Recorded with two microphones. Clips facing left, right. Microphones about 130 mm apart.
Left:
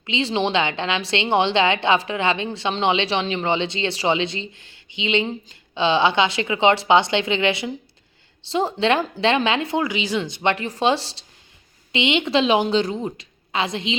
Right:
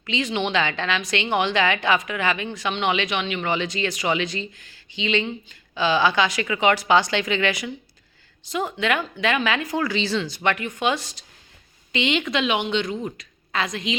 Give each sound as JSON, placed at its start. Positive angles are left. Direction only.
{"t": 0.0, "sound": "speech", "side_deg": 25}